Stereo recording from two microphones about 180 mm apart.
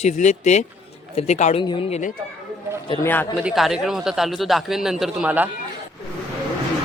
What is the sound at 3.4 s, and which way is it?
Speech, centre (ahead or behind).